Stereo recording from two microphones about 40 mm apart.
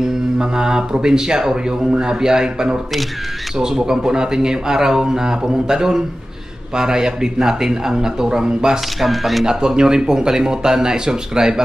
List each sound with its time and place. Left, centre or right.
0.0 s mantra: centre
1.0 s speech: centre
9.0 s speech: centre
9.5 s speech: centre